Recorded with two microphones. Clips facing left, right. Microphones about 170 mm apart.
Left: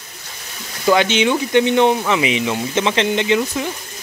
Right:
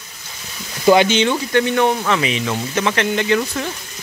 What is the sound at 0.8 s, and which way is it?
Speech, 10° right (ahead or behind).